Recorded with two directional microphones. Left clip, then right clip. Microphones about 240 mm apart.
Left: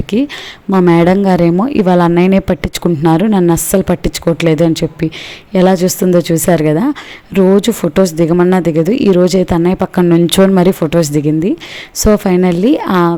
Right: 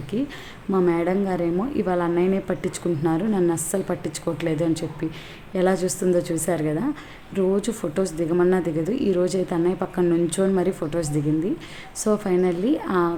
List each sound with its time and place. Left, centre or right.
0.1 s speech: left